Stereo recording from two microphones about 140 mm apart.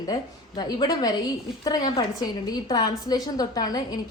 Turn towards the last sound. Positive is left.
turn(degrees=25)  # may be behind; listen again after turning